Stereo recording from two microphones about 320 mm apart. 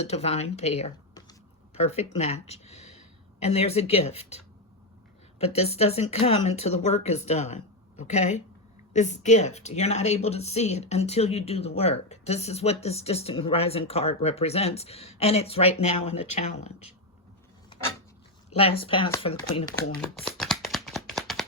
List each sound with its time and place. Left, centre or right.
0.0 s speech: centre
5.5 s speech: centre
18.5 s speech: centre
20.0 s a sound: centre